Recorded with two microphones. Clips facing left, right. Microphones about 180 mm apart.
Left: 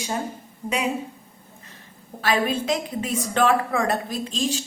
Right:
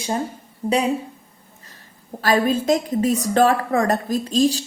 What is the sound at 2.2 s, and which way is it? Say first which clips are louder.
A woman's voice: right 5 dB; 40° right (ahead or behind).